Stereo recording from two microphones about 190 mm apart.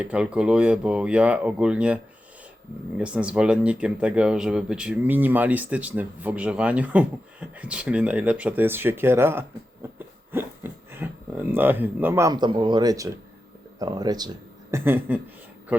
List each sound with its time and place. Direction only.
0.0 s speech: 5° right (ahead or behind)
3.0 s speech: 5° right (ahead or behind)
9.8 s a sound: 15° right (ahead or behind)
11.5 s speech: 10° right (ahead or behind)
14.7 s speech: 10° right (ahead or behind)